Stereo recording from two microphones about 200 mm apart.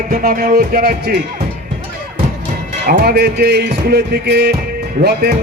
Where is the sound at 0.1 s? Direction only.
45° right (ahead or behind).